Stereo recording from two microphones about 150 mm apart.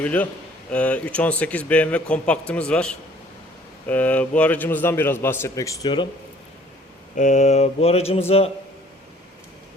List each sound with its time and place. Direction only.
0.0 s speech: 10° left (ahead or behind); by 6.1 s 30° left (ahead or behind)
7.2 s a sound: 55° left (ahead or behind)
8.3 s a man's voice: 40° left (ahead or behind)